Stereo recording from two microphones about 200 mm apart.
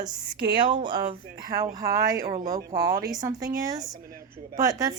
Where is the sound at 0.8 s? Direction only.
25° right (ahead or behind).